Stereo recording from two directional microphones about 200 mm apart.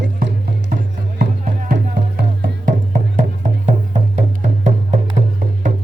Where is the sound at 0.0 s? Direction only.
55° right (ahead or behind).